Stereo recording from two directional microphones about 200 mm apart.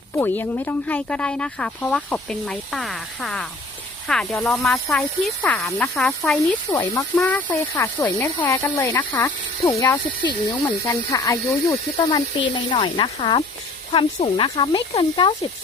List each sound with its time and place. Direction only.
0.2 s speech: 10° left (ahead or behind)
6.7 s speech: 15° left (ahead or behind)